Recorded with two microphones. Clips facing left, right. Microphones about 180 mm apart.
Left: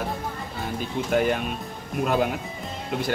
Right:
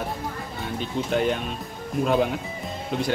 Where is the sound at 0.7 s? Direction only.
5° left (ahead or behind).